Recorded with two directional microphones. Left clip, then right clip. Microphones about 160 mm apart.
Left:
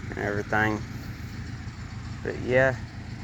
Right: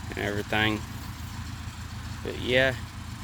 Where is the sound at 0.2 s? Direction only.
45° right (ahead or behind).